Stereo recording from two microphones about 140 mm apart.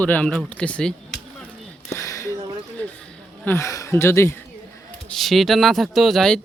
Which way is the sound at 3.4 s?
20° left (ahead or behind).